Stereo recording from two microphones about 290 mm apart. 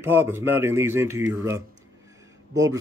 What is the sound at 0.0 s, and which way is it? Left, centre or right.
A man's voice, centre.